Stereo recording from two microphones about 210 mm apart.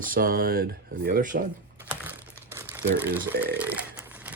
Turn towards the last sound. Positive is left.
turn(degrees=-10)  # may be behind; listen again after turning